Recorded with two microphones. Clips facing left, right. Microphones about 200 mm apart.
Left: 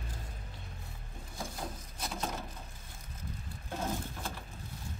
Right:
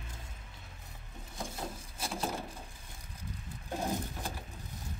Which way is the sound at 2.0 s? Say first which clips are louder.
Right 2 dB; 10° right (ahead or behind).